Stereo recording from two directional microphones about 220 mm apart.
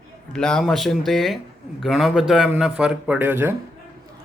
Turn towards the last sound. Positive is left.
turn(degrees=-10)  # may be behind; listen again after turning